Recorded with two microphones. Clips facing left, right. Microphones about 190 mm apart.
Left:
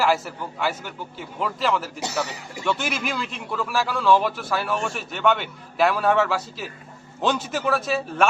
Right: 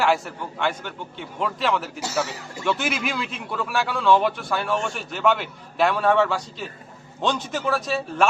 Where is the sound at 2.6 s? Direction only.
Centre (ahead or behind).